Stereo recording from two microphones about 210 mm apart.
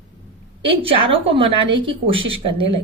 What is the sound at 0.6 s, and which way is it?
A woman's voice, 25° right (ahead or behind).